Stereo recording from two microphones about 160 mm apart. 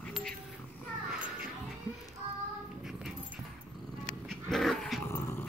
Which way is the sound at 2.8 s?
Centre (ahead or behind).